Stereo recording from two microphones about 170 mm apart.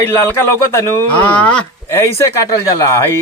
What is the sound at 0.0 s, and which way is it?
Speech, 10° left (ahead or behind).